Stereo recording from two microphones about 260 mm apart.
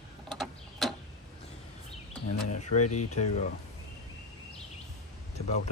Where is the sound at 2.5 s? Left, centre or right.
Left.